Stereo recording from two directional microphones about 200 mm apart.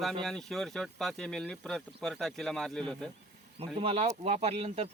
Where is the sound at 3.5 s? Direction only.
30° right (ahead or behind).